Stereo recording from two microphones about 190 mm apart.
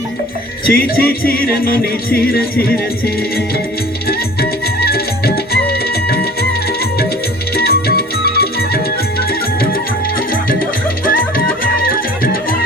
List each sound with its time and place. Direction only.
0.7 s music: 50° left (ahead or behind)
4.1 s music: 55° left (ahead or behind)
7.5 s music: 55° left (ahead or behind)
10.2 s music: 50° left (ahead or behind)